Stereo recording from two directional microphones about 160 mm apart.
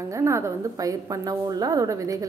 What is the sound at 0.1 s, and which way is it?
A woman's voice, 20° right (ahead or behind).